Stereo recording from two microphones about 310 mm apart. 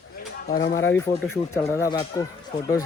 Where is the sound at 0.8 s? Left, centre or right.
Centre.